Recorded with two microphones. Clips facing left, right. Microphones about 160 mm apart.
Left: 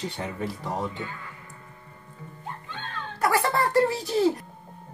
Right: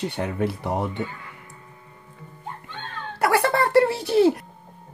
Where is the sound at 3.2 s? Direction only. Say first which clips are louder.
Right 3 dB; 70° right (ahead or behind).